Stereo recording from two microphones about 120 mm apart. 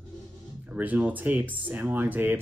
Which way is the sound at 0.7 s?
10° right (ahead or behind).